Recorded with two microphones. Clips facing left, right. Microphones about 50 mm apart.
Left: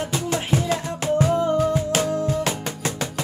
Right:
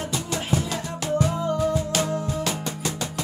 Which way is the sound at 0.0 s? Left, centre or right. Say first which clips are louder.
Left 4 dB; left.